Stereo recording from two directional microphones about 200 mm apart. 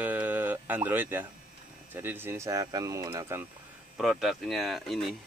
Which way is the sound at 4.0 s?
Centre (ahead or behind).